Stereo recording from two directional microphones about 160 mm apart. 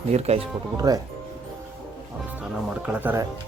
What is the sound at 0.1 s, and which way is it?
Speech, 40° right (ahead or behind).